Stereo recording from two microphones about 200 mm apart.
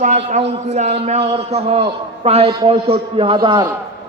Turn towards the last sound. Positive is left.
turn(degrees=-20)  # may be behind; listen again after turning